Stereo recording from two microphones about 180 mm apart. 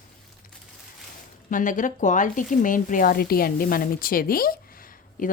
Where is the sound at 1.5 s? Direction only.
45° left (ahead or behind).